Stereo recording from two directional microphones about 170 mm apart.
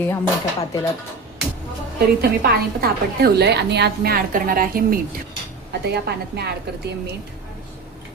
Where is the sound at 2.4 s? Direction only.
65° right (ahead or behind).